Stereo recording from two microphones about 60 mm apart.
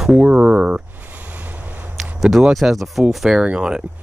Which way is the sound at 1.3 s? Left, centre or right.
Right.